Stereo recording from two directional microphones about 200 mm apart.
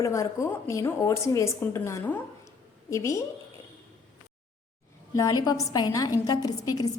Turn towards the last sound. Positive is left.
turn(degrees=20)  # may be behind; listen again after turning